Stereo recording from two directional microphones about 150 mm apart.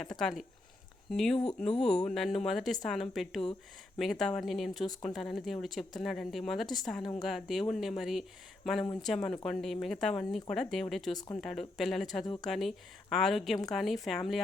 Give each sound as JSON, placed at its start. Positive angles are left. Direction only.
{"t": 0.0, "sound": "speech", "side_deg": 5}
{"t": 12.2, "sound": "speech", "side_deg": 25}
{"t": 12.5, "sound": "speech", "side_deg": 0}